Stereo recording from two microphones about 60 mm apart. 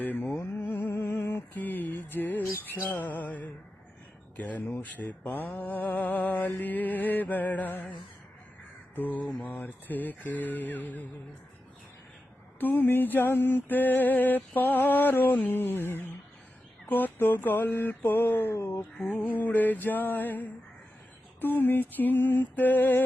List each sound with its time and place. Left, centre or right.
0.0 s mantra: left
0.6 s music: left
4.4 s mantra: left
9.0 s mantra: left
12.5 s a sound: left
19.2 s mantra: left
21.4 s a sound: left